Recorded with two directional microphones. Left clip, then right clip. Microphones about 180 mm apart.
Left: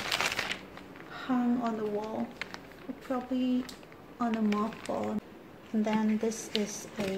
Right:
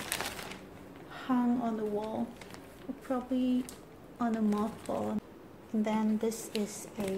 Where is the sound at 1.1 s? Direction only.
5° right (ahead or behind).